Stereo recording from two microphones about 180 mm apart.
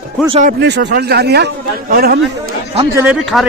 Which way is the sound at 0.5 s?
70° right (ahead or behind).